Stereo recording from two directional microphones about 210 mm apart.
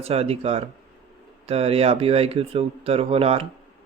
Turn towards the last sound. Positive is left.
turn(degrees=-30)  # may be behind; listen again after turning